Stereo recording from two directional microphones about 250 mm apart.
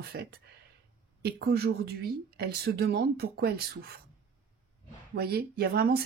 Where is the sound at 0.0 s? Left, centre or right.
Right.